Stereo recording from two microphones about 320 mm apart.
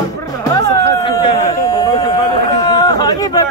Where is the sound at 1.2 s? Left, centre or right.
Centre.